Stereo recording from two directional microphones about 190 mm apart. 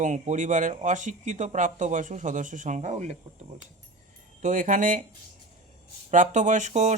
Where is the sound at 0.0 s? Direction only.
40° right (ahead or behind).